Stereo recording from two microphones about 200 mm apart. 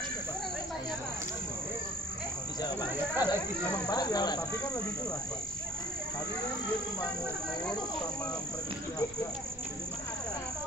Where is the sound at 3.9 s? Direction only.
20° left (ahead or behind).